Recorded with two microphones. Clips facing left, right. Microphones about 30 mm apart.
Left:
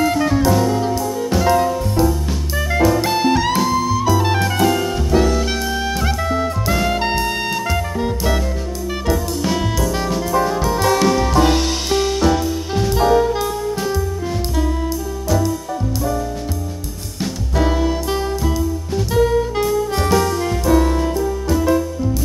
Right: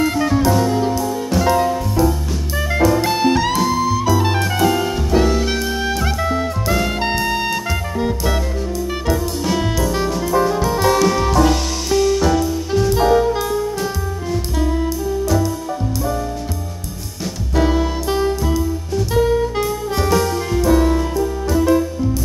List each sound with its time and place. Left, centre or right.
0.0 s music: centre
11.3 s music: left
12.2 s music: centre
12.9 s jazz: centre
17.6 s music: centre